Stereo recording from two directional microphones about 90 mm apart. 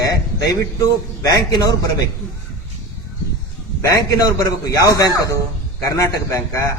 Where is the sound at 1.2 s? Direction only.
45° left (ahead or behind).